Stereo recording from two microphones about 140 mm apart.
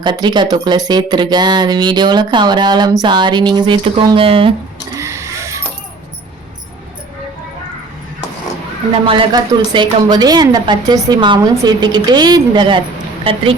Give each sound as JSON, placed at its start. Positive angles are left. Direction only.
{"t": 0.0, "sound": "speech", "side_deg": -35}
{"t": 4.9, "sound": "a sound", "side_deg": -20}
{"t": 9.0, "sound": "speech", "side_deg": -35}